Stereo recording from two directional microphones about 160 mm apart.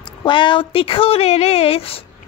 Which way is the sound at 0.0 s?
30° left (ahead or behind).